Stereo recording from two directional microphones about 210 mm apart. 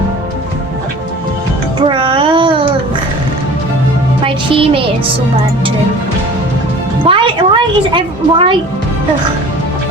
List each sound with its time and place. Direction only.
1.8 s a sound: 25° right (ahead or behind)
4.2 s music: 25° right (ahead or behind)
7.0 s music: 25° right (ahead or behind)